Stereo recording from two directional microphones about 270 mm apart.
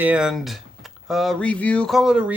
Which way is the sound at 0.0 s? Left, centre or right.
Centre.